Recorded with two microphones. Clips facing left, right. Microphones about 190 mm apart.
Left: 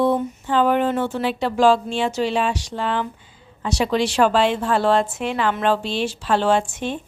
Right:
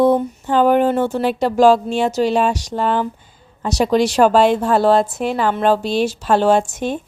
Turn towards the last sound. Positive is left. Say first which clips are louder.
# right 4 dB
turn(degrees=-40)  # may be behind; listen again after turning